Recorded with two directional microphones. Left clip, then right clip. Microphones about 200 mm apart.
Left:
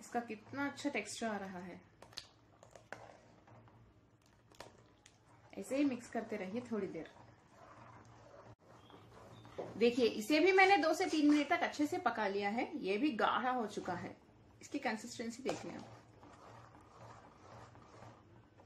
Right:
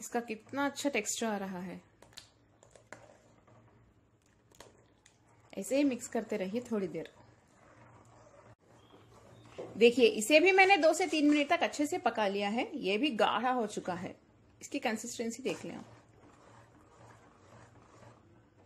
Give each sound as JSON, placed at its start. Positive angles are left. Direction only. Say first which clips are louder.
{"t": 0.1, "sound": "speech", "louder": "right 5 dB", "side_deg": -50}
{"t": 5.5, "sound": "speech", "louder": "right 6 dB", "side_deg": -50}
{"t": 9.8, "sound": "a woman's voice", "louder": "right 8 dB", "side_deg": -35}